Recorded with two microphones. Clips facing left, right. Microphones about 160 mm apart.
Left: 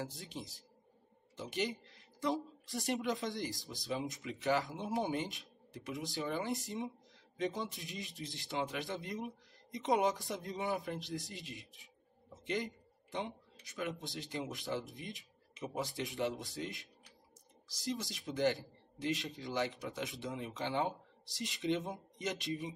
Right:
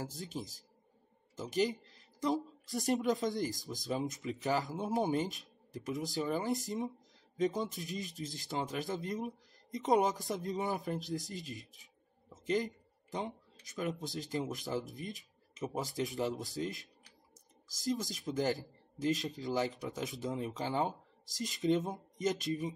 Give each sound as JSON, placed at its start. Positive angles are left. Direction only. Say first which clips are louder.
{"t": 0.0, "sound": "speech", "louder": "right 3 dB", "side_deg": -40}